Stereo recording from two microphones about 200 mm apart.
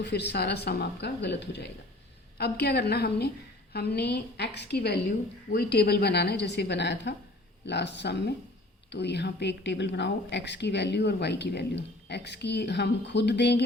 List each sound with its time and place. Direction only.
0.0 s a woman's voice: 60° left (ahead or behind)